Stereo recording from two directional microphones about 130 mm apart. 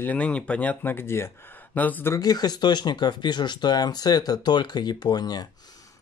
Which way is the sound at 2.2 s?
30° left (ahead or behind).